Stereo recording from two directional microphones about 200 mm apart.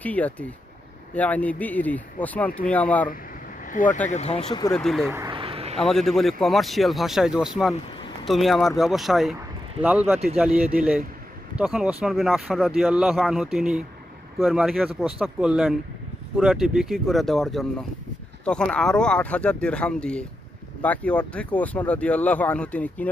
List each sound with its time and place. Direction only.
0.0 s speech: 5° left (ahead or behind)
3.7 s speech: 40° left (ahead or behind)
4.7 s speech: centre (ahead or behind)
5.1 s a sound: 20° right (ahead or behind)
5.7 s speech: centre (ahead or behind)
10.3 s speech: 5° right (ahead or behind)